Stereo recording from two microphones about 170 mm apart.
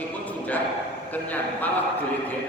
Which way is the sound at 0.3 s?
10° left (ahead or behind).